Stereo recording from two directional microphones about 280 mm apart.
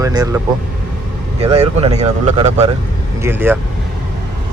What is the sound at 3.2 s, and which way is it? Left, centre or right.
Speech, centre.